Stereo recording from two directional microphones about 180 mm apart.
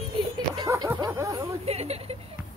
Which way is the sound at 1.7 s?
35° right (ahead or behind).